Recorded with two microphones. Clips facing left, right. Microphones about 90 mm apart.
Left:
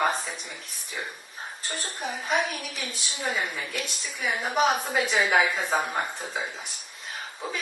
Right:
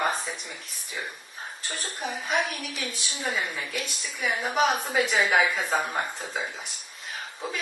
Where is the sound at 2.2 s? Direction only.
Centre (ahead or behind).